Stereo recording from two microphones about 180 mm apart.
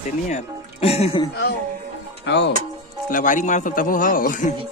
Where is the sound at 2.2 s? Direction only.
70° left (ahead or behind).